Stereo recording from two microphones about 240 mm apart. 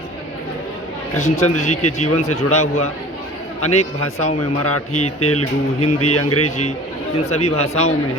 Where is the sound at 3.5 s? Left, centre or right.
Left.